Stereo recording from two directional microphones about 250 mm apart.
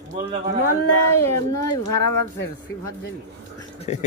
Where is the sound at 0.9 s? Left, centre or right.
Left.